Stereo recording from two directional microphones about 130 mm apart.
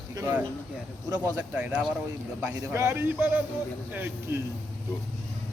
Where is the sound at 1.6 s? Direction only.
10° right (ahead or behind).